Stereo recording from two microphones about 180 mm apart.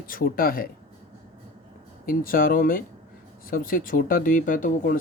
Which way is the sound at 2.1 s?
50° left (ahead or behind).